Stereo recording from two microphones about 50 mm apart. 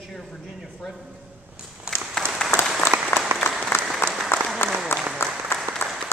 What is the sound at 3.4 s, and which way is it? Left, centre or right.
Applause, left.